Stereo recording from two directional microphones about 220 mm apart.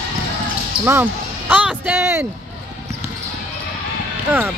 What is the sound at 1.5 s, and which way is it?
Speech, 5° right (ahead or behind).